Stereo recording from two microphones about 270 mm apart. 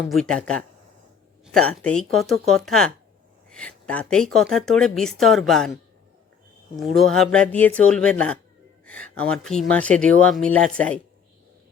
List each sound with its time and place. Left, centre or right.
0.1 s a woman's voice: centre
6.7 s a woman's voice: centre